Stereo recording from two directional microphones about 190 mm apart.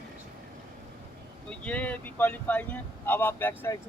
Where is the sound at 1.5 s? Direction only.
5° left (ahead or behind).